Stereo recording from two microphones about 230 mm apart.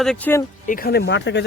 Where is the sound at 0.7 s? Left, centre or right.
Left.